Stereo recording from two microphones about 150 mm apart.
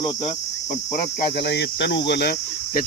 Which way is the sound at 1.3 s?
90° left.